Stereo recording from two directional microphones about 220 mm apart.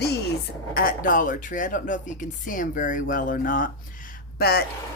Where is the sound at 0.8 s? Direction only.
40° left (ahead or behind).